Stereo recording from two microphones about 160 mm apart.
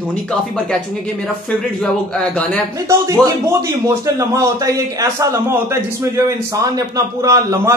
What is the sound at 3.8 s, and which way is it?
A man's voice, 20° right (ahead or behind).